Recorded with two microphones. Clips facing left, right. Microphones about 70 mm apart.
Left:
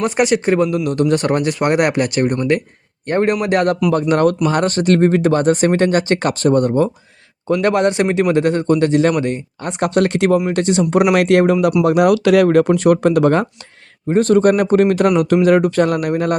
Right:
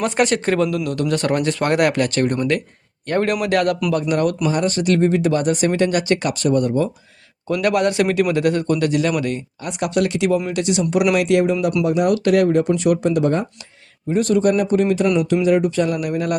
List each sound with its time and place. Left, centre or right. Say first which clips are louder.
0.0 s a man's voice: left 3 dB; centre
0.9 s speech: left 4 dB; left
3.1 s speech: left 3 dB; left
4.1 s a man's voice: left 5 dB; left
9.8 s a man's voice: left 4 dB; left
11.1 s speech: left 4 dB; left
11.8 s speech: left 4 dB; left
12.7 s speech: left 5 dB; left
14.1 s speech: left 4 dB; left